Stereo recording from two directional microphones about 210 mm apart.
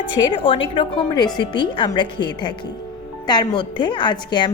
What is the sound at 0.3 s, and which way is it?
Speech, 25° left (ahead or behind).